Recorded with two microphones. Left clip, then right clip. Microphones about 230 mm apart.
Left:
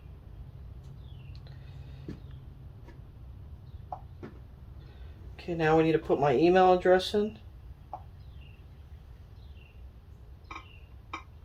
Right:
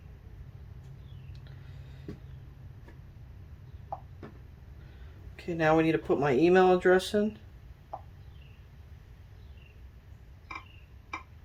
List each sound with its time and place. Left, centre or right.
5.4 s speech: right